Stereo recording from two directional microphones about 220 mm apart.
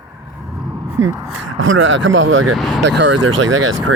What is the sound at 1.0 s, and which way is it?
Speech, 55° right (ahead or behind).